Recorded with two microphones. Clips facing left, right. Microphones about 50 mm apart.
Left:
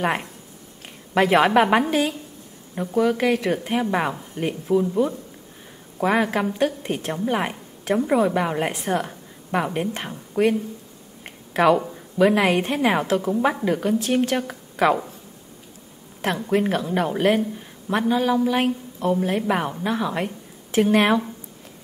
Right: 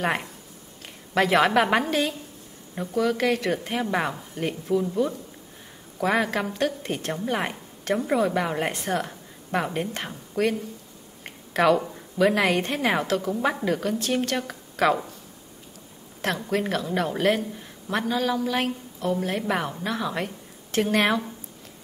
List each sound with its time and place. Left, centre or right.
0.0 s a woman's voice: centre
11.2 s a sound: centre
11.8 s a woman's voice: centre
16.2 s a woman's voice: centre
17.6 s a sound: centre
18.0 s a woman's voice: centre